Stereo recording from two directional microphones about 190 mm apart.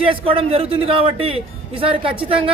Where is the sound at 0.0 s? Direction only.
30° right (ahead or behind).